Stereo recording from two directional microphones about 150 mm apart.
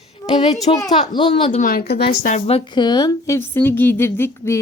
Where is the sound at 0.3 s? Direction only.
50° left (ahead or behind).